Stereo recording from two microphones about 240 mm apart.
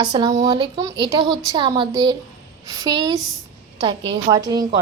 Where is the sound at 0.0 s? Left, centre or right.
Centre.